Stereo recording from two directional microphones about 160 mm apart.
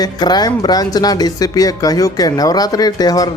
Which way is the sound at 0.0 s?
25° left (ahead or behind).